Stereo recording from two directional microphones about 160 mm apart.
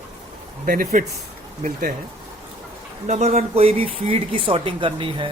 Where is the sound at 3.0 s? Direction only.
45° right (ahead or behind).